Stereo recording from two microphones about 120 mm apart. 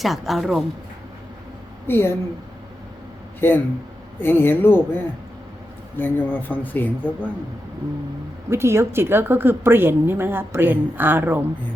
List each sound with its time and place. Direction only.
0.0 s a woman's voice: centre (ahead or behind)
1.9 s speech: 20° left (ahead or behind)
3.4 s speech: 20° left (ahead or behind)
6.0 s speech: 15° left (ahead or behind)
8.4 s a woman's voice: 20° right (ahead or behind)